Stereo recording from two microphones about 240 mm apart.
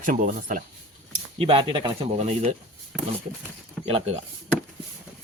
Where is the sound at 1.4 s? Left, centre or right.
Right.